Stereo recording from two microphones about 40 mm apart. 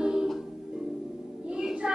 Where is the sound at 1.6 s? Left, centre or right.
Right.